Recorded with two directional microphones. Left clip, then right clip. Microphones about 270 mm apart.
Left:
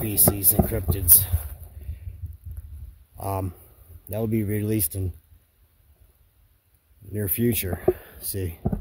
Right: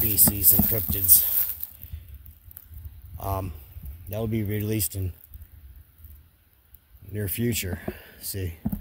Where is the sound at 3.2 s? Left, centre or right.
Centre.